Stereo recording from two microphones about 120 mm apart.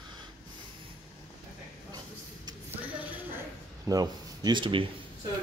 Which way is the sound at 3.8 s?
30° right (ahead or behind).